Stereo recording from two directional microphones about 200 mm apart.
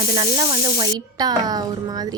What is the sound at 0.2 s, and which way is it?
Speech, 20° right (ahead or behind).